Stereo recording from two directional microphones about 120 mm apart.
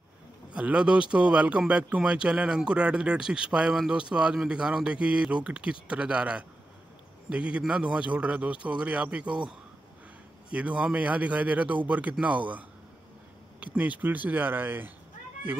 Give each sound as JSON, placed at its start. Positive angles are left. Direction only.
{"t": 0.5, "sound": "a man's voice", "side_deg": -10}
{"t": 10.5, "sound": "a man's voice", "side_deg": -10}
{"t": 13.7, "sound": "a man's voice", "side_deg": -10}